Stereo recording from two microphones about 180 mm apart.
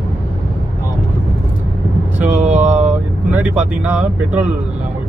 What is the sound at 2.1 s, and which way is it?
Speech, 10° right (ahead or behind).